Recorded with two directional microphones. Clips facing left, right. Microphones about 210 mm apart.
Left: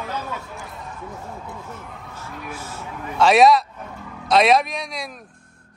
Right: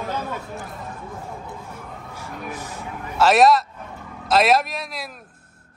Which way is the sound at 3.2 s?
Centre (ahead or behind).